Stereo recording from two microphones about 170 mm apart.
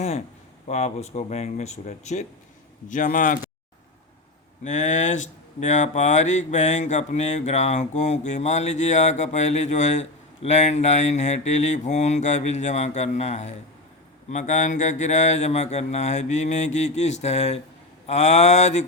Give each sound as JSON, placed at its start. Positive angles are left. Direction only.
{"t": 0.7, "sound": "speech", "side_deg": 40}
{"t": 4.6, "sound": "speech", "side_deg": 45}